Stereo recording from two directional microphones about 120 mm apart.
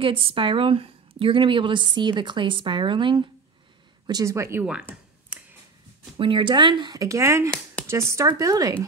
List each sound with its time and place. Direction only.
0.0 s a woman's voice: 50° right (ahead or behind)
4.1 s speech: 25° right (ahead or behind)
5.3 s a sound: 10° right (ahead or behind)
6.1 s speech: 45° right (ahead or behind); by 8.7 s 30° right (ahead or behind)